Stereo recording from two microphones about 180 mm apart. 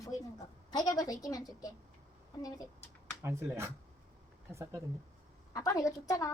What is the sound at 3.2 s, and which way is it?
Speech, 15° right (ahead or behind).